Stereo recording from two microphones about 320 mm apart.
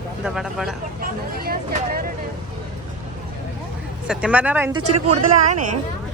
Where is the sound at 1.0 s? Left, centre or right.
Right.